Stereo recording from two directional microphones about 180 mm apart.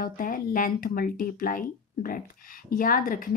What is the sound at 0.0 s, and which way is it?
Speech, 50° left (ahead or behind).